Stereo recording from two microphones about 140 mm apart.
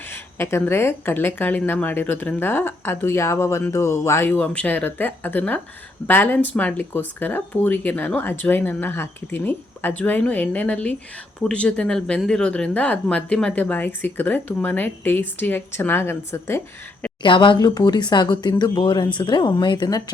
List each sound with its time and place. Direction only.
0.0 s speech: 15° left (ahead or behind)
17.2 s speech: 35° left (ahead or behind)